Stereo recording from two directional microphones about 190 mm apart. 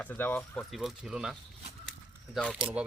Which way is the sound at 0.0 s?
10° left (ahead or behind).